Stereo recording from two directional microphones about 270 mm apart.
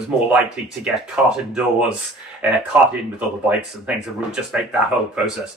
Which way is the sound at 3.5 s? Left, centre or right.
Centre.